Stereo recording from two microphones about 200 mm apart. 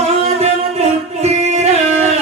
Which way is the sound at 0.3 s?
30° right (ahead or behind).